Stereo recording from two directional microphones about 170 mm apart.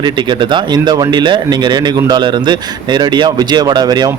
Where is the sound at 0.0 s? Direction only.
25° right (ahead or behind).